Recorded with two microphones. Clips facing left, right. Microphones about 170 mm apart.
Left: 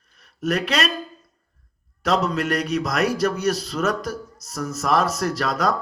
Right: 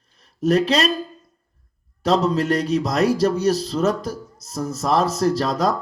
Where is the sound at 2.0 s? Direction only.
30° right (ahead or behind).